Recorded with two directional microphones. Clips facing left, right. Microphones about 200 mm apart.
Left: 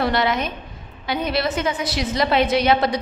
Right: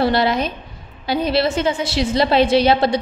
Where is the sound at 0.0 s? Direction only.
30° right (ahead or behind).